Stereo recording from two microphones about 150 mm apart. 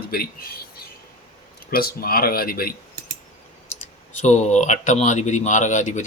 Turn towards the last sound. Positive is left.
turn(degrees=55)  # may be behind; listen again after turning